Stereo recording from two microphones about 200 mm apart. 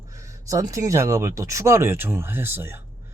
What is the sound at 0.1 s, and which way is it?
Speech, 15° right (ahead or behind).